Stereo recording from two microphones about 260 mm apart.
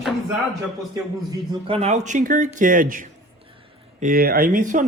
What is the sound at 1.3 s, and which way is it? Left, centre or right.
Speech, right.